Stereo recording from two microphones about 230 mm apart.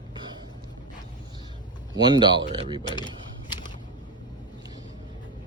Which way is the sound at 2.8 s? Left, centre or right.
Centre.